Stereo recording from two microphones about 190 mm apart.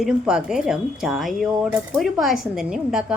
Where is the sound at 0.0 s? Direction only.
5° right (ahead or behind).